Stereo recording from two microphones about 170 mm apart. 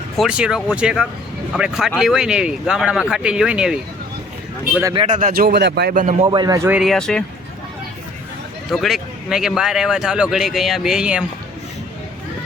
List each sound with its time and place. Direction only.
0.2 s speech: 5° right (ahead or behind)
5.0 s speech: 45° right (ahead or behind)
5.3 s speech: 65° right (ahead or behind)
5.9 s speech: 50° right (ahead or behind)
6.3 s a man's voice: 25° right (ahead or behind)
6.7 s speech: 5° right (ahead or behind)
8.7 s speech: centre (ahead or behind)